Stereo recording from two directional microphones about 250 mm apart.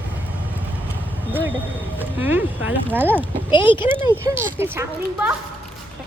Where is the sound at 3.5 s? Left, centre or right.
Centre.